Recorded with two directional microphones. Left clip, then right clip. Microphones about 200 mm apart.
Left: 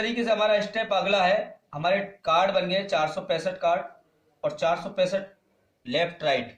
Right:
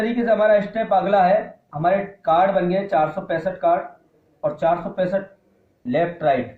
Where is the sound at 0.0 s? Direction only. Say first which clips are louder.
Right 6 dB; 45° left (ahead or behind).